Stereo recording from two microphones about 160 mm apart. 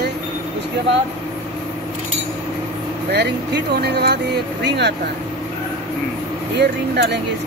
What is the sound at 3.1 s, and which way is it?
Speech, 90° right.